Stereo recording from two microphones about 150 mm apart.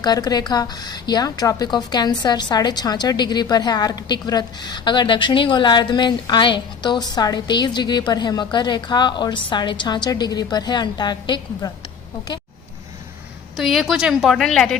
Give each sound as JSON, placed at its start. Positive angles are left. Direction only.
{"t": 0.0, "sound": "a woman's voice", "side_deg": 25}
{"t": 13.6, "sound": "a woman's voice", "side_deg": 0}